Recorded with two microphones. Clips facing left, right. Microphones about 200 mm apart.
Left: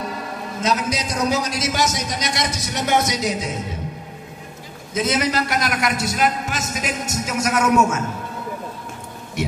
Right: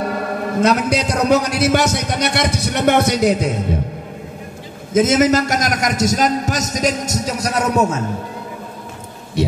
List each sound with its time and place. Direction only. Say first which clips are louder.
0.0 s a man's voice: right 8 dB; 60° right (ahead or behind)
4.9 s a man's voice: right 8 dB; 45° right (ahead or behind)